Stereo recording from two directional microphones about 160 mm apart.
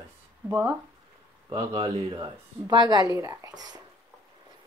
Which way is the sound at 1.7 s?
35° right (ahead or behind).